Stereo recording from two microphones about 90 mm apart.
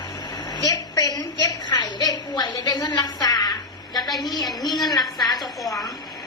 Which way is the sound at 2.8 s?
50° left (ahead or behind).